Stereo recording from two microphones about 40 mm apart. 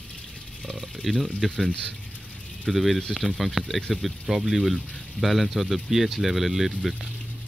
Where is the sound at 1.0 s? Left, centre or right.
Centre.